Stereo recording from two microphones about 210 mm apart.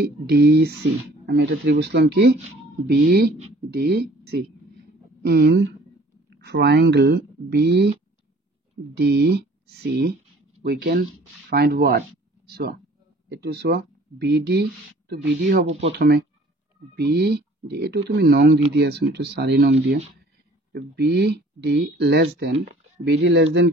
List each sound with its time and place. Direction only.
0.0 s speech: 50° right (ahead or behind)
3.7 s a sound: 50° right (ahead or behind)
6.3 s speech: 55° right (ahead or behind)
8.9 s speech: 50° right (ahead or behind)